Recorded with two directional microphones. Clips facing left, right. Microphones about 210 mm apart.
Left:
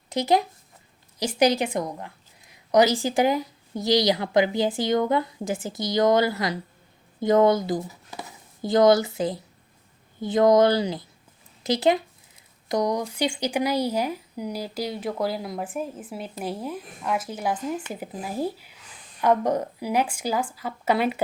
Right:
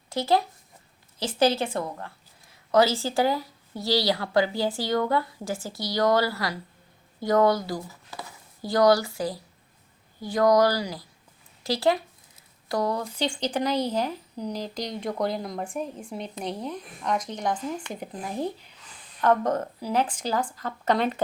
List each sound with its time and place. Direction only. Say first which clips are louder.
0.1 s a woman's voice: left 2 dB; 20° left (ahead or behind)